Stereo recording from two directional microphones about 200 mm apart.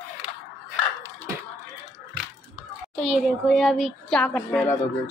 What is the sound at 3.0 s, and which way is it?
Speech, centre (ahead or behind).